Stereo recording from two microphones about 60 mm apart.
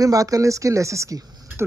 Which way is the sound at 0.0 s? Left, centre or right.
Right.